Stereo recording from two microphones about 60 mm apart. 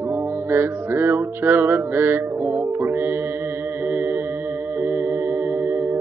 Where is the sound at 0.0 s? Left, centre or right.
Right.